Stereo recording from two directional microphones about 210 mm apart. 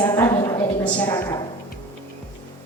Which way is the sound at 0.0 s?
15° left (ahead or behind).